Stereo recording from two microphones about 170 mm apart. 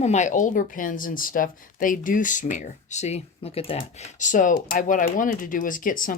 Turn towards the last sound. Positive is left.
turn(degrees=55)  # may be behind; listen again after turning